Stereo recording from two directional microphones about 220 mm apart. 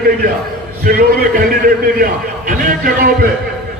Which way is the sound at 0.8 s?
40° right (ahead or behind).